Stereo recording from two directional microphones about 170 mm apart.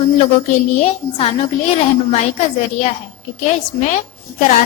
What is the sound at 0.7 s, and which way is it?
Speech, 40° left (ahead or behind).